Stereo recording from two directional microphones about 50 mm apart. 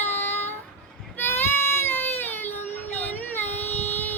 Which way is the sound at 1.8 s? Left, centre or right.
Left.